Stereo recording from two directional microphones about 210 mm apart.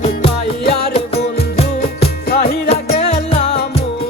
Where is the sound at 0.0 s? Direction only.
25° left (ahead or behind).